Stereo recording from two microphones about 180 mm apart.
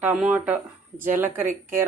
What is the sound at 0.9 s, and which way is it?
Speech, 50° right (ahead or behind).